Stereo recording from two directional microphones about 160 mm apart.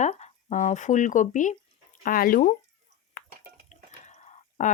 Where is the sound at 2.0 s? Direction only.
60° left (ahead or behind).